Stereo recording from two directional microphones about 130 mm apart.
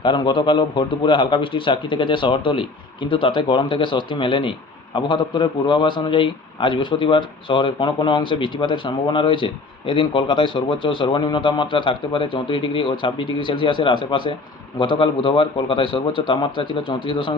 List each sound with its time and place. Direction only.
0.0 s speech: 40° left (ahead or behind)